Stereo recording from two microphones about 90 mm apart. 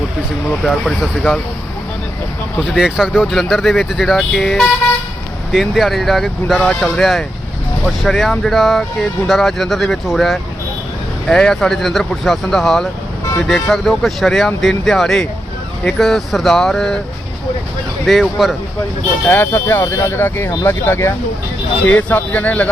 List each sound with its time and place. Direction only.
0.6 s speech: 5° left (ahead or behind)
2.7 s speech: 10° right (ahead or behind)
18.0 s speech: centre (ahead or behind)
19.3 s speech: 25° left (ahead or behind)